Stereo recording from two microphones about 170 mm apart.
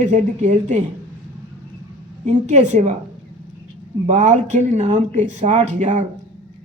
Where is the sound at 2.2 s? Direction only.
45° right (ahead or behind).